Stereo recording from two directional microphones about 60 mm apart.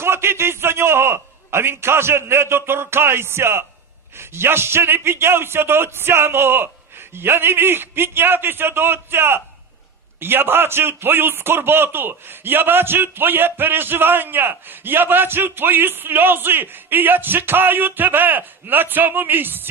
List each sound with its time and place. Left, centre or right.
0.0 s a man's voice: right